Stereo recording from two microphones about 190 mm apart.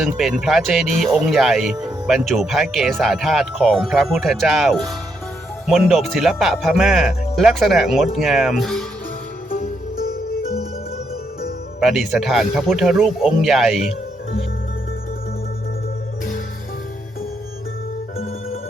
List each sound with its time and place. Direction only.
0.0 s speech: centre (ahead or behind)
9.5 s music: 50° left (ahead or behind)
11.8 s speech: centre (ahead or behind)